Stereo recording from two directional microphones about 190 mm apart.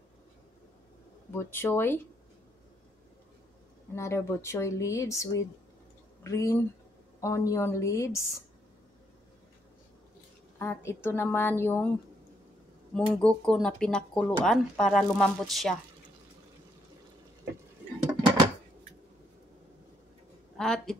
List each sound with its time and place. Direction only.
1.3 s speech: 10° left (ahead or behind)
3.9 s speech: 15° left (ahead or behind)
10.6 s speech: 15° left (ahead or behind)
12.9 s speech: 5° left (ahead or behind)
20.5 s speech: 5° left (ahead or behind)